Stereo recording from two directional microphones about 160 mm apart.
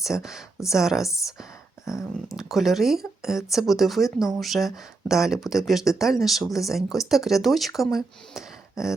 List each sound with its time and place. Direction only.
0.0 s speech: 5° right (ahead or behind)
1.8 s a sound: 20° left (ahead or behind)
2.3 s speech: centre (ahead or behind)